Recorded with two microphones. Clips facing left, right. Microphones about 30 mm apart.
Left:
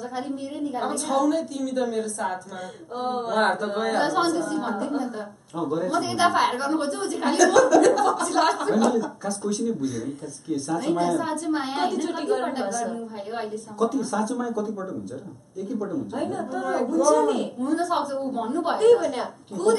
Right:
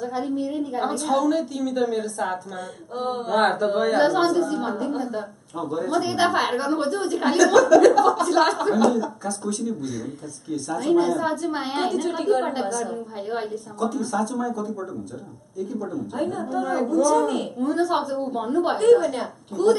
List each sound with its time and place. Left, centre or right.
0.4 s a woman's voice: centre
16.2 s a woman's voice: centre